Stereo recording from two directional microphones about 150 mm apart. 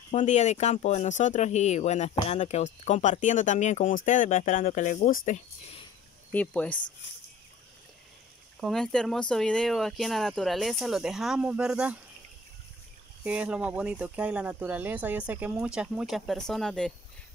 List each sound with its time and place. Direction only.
0.1 s speech: 50° left (ahead or behind)
6.3 s speech: 10° left (ahead or behind)
8.5 s speech: centre (ahead or behind)
13.2 s speech: 10° right (ahead or behind)